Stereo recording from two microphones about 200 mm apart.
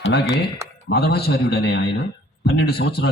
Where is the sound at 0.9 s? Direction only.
55° left (ahead or behind).